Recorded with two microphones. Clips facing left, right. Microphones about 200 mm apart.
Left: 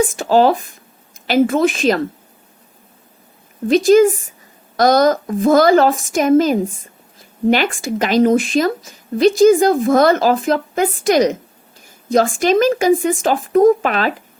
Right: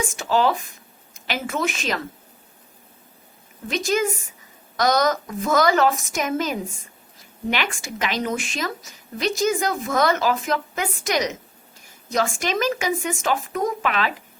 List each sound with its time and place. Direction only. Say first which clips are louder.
0.1 s a woman's voice: left 8 dB; 35° left (ahead or behind)
3.7 s a woman's voice: left 13 dB; 35° left (ahead or behind)
7.8 s a woman's voice: left 12 dB; 35° left (ahead or behind)